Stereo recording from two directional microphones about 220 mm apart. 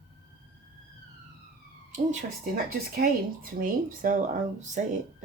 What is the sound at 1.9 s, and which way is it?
Speech, 35° right (ahead or behind).